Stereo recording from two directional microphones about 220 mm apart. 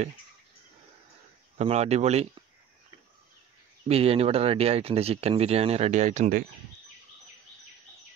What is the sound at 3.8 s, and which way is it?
Speech, 25° right (ahead or behind).